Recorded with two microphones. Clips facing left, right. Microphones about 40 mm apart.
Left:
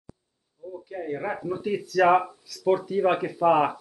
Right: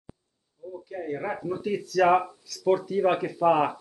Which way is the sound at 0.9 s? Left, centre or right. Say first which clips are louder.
Left 1 dB; centre.